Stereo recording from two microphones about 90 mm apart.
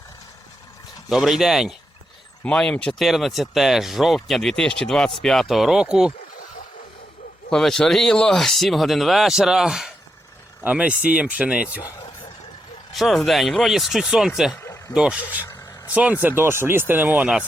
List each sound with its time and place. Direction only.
1.1 s speech: 5° right (ahead or behind)
2.4 s speech: 10° left (ahead or behind); by 6.1 s 10° right (ahead or behind)
7.5 s speech: 5° left (ahead or behind)
10.6 s speech: 15° right (ahead or behind)
12.9 s speech: centre (ahead or behind)
14.6 s vehicle: 35° left (ahead or behind)
14.9 s speech: 10° right (ahead or behind)
16.4 s speech: 25° right (ahead or behind)